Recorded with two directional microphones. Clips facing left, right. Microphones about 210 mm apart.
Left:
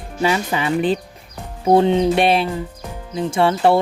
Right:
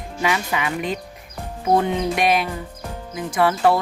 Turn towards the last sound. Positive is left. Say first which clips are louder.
# left 2 dB
turn(degrees=25)  # may be behind; listen again after turning